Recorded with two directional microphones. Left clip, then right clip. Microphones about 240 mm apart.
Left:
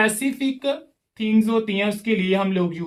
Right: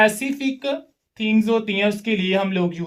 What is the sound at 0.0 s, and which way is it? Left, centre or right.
Speech, right.